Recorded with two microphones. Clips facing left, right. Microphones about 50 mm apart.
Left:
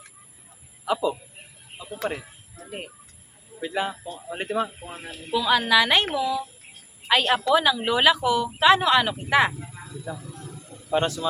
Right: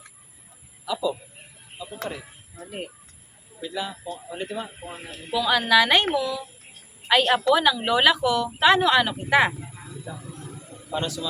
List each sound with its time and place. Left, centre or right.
0.9 s a man's voice: left
3.6 s a man's voice: left
5.3 s speech: centre
8.5 s speech: centre
9.5 s a sound: centre
10.9 s a man's voice: left